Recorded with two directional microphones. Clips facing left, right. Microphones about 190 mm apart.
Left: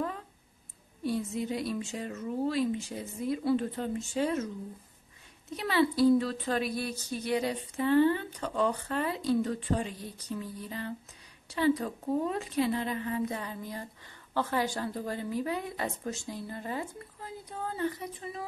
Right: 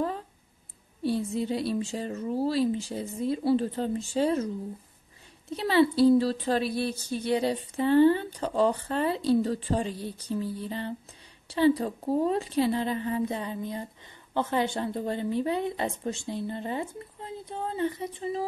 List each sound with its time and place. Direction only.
1.0 s a woman's voice: 30° right (ahead or behind)
5.5 s a woman's voice: 30° right (ahead or behind)